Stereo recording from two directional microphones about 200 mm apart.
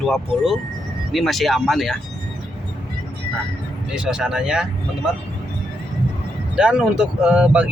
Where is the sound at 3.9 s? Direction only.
5° right (ahead or behind).